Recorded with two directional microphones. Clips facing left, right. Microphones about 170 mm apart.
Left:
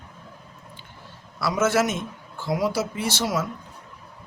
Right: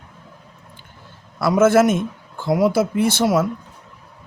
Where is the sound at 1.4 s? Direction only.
50° right (ahead or behind).